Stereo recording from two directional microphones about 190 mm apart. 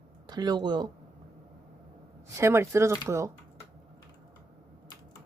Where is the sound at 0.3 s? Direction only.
20° right (ahead or behind).